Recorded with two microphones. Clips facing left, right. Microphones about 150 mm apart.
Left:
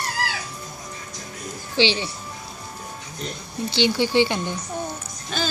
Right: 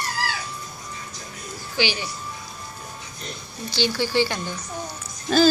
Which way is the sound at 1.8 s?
25° left (ahead or behind).